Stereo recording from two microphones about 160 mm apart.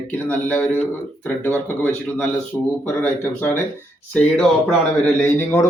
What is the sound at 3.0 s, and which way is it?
Speech, 15° left (ahead or behind).